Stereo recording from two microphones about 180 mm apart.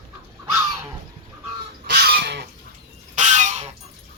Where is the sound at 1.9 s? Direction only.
65° right (ahead or behind).